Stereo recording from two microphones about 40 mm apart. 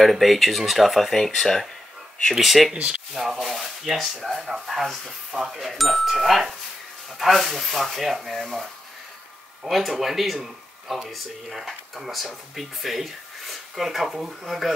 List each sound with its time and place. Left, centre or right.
0.0 s speech: centre
2.7 s speech: right
3.1 s speech: centre
9.7 s speech: centre